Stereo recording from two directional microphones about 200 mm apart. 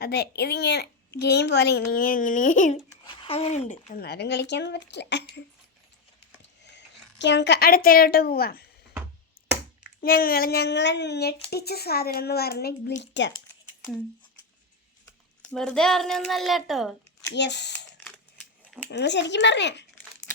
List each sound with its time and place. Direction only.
0.0 s a child's voice: 55° left (ahead or behind); by 3.9 s 35° left (ahead or behind)
3.9 s speech: 50° left (ahead or behind)
6.7 s a woman's voice: 60° left (ahead or behind)
10.0 s a child's voice: 50° left (ahead or behind)
13.0 s speech: 60° left (ahead or behind)
15.4 s a child's voice: 5° left (ahead or behind)
17.3 s speech: 60° left (ahead or behind)
18.0 s a sound: 5° left (ahead or behind)
18.9 s speech: 60° left (ahead or behind)